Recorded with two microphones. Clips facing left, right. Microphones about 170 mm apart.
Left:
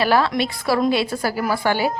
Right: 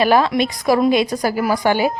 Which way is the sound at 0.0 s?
15° right (ahead or behind).